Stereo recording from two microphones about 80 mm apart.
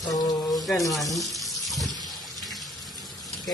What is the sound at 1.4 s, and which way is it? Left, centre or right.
Water tap, centre.